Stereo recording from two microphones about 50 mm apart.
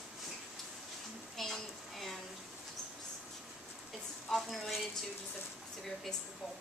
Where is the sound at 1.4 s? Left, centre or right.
Centre.